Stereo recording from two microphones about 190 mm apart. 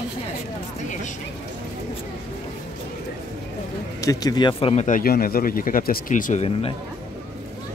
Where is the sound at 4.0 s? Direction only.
20° left (ahead or behind); by 6.7 s 35° left (ahead or behind).